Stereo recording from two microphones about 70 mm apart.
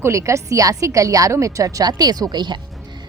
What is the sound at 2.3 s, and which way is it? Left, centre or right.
Speech, right.